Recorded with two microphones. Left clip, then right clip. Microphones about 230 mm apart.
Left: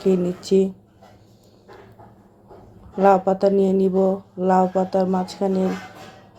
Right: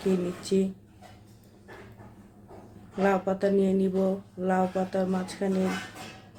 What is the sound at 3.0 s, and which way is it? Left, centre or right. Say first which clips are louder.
Mantra: left 10 dB; left.